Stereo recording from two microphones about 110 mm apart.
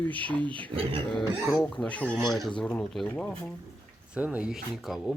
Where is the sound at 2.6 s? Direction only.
10° left (ahead or behind).